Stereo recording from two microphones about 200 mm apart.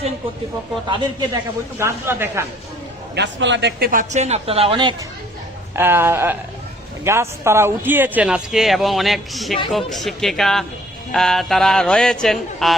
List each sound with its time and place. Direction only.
0.9 s a man's voice: 25° right (ahead or behind)
1.8 s a woman's voice: 10° right (ahead or behind)
3.2 s speech: 60° right (ahead or behind); by 4.9 s 25° right (ahead or behind)
5.7 s a woman's voice: 10° right (ahead or behind)